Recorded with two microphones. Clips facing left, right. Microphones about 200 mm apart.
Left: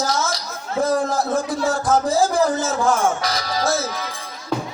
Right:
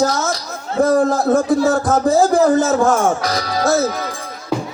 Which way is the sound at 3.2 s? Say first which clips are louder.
Right 4 dB; 60° right (ahead or behind).